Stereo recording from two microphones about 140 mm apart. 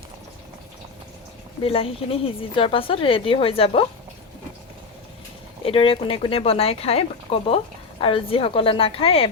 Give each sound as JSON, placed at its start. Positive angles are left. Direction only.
{"t": 1.6, "sound": "speech", "side_deg": 45}
{"t": 5.6, "sound": "speech", "side_deg": 40}